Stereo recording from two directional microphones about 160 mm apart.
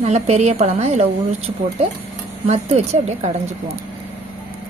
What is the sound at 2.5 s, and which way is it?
Speech, 40° right (ahead or behind).